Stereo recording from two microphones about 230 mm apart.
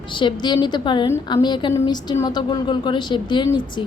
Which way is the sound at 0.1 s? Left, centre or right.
Left.